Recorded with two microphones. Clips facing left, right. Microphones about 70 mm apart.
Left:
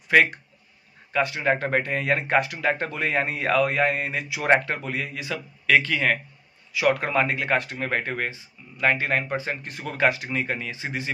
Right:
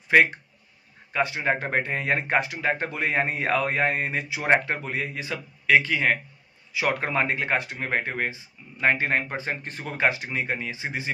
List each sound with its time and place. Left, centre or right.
0.1 s speech: right
9.8 s speech: right